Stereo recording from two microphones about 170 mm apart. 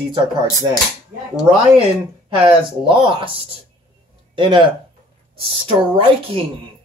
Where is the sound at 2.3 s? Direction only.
30° right (ahead or behind).